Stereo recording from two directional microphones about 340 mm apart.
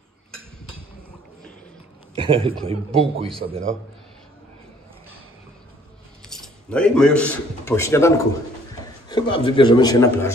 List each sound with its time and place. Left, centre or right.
2.1 s a man's voice: centre
6.2 s a man's voice: centre